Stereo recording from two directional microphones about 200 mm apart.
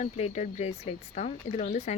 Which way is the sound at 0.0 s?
35° left (ahead or behind).